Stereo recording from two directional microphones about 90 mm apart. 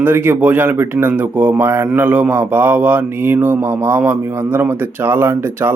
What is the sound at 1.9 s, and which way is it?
Mantra, 15° right (ahead or behind).